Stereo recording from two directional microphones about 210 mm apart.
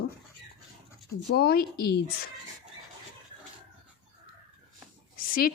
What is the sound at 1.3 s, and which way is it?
Speech, 45° left (ahead or behind).